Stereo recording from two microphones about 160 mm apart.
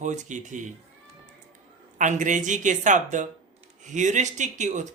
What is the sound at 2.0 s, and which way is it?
Speech, 50° right (ahead or behind).